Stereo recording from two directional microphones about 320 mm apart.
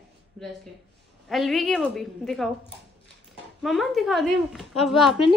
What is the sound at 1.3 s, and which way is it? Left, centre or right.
Speech, centre.